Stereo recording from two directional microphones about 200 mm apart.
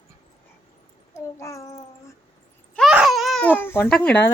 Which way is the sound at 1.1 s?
15° left (ahead or behind).